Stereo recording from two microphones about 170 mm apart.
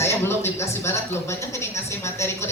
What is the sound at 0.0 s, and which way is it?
A woman's voice, 15° left (ahead or behind).